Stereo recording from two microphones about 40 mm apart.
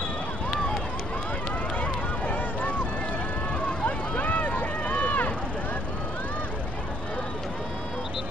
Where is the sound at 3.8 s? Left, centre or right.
Left.